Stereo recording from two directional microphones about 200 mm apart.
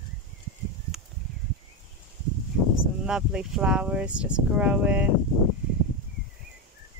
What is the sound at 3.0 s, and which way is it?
Speech, 5° right (ahead or behind).